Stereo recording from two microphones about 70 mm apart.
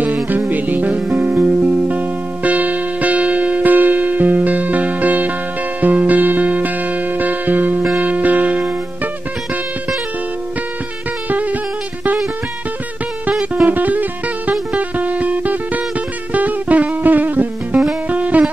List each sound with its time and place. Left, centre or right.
0.0 s music: right
11.2 s music: right
13.3 s music: centre
13.7 s music: right